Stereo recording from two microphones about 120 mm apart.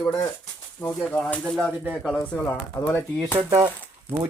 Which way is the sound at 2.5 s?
20° left (ahead or behind).